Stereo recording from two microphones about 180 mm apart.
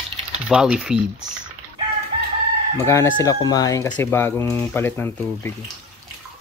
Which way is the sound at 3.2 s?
20° left (ahead or behind).